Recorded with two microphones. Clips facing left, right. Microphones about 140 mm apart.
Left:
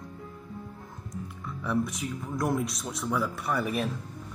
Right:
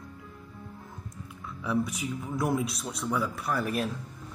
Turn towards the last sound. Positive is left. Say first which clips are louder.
# left 1 dB
turn(degrees=0)  # may be behind; listen again after turning